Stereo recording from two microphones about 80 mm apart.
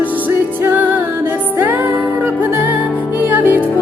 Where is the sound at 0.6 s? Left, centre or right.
Right.